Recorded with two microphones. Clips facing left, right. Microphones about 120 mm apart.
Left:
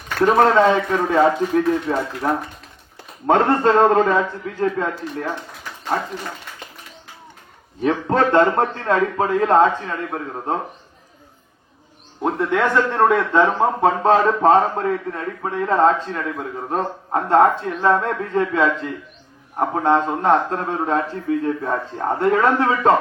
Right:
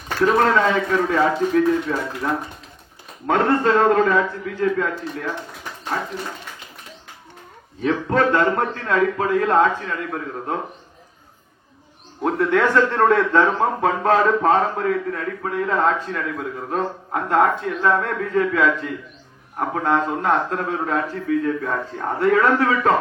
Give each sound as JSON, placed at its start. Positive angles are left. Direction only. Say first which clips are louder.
{"t": 0.3, "sound": "a man's voice", "louder": "left 4 dB", "side_deg": 30}
{"t": 7.8, "sound": "speech", "louder": "left 1 dB", "side_deg": 30}
{"t": 12.2, "sound": "speech", "louder": "right 1 dB", "side_deg": 15}